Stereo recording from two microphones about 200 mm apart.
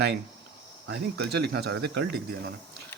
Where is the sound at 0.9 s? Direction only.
55° right (ahead or behind).